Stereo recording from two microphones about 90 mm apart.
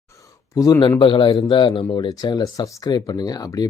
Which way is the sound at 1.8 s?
50° left (ahead or behind).